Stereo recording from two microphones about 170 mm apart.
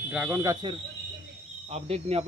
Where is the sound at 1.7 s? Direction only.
35° right (ahead or behind).